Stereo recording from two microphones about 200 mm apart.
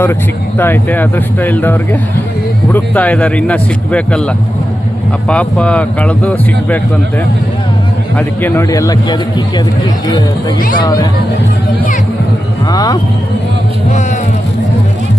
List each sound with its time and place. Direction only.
0.6 s a man's voice: 10° left (ahead or behind)
5.3 s a man's voice: 5° left (ahead or behind)
8.4 s a man's voice: 10° left (ahead or behind)
10.8 s speech: 20° left (ahead or behind)
12.7 s speech: 20° left (ahead or behind)